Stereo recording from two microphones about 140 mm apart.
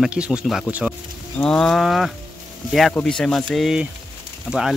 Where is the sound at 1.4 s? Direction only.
5° left (ahead or behind).